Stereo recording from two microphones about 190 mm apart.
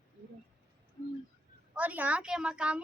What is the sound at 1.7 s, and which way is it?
Speech, 10° right (ahead or behind).